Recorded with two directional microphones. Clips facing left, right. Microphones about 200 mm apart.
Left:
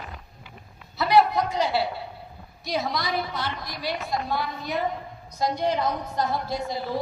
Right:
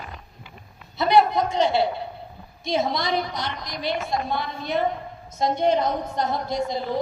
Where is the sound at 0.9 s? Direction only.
20° right (ahead or behind).